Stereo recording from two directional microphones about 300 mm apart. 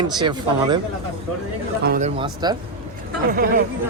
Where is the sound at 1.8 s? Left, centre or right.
Right.